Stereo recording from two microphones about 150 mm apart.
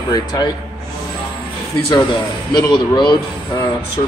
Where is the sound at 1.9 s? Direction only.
30° left (ahead or behind).